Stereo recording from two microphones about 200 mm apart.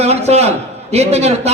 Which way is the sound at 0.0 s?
30° right (ahead or behind).